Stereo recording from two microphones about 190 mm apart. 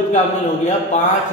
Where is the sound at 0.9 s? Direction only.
35° left (ahead or behind).